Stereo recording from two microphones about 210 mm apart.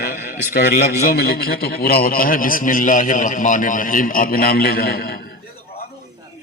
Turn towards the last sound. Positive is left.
turn(degrees=45)  # may be behind; listen again after turning